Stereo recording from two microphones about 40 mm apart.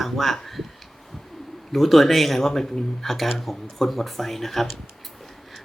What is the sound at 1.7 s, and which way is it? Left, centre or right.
Speech, centre.